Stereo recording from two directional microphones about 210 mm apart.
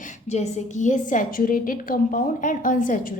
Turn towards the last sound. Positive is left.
turn(degrees=40)  # may be behind; listen again after turning